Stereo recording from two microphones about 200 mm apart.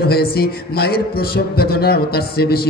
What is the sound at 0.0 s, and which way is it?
A man's voice, 50° left (ahead or behind).